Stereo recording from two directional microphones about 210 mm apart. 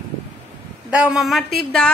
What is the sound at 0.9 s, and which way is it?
Speech, 5° right (ahead or behind).